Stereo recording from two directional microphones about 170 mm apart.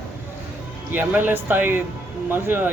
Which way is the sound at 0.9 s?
10° right (ahead or behind).